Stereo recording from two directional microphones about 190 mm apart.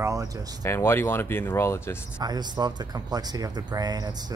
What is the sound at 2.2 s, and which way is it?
Speech, 20° right (ahead or behind).